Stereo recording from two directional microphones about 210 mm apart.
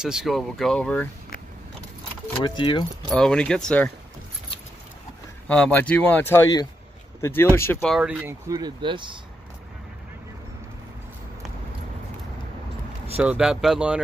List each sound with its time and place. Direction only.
0.0 s speech: 5° right (ahead or behind)
2.4 s speech: 20° left (ahead or behind)
3.1 s speech: 5° left (ahead or behind)
5.5 s speech: 5° left (ahead or behind)
7.8 s speech: centre (ahead or behind); by 9.2 s 20° right (ahead or behind)
13.2 s speech: 5° right (ahead or behind)